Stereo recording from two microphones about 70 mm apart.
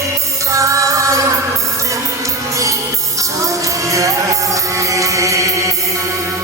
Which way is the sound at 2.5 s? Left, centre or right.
Right.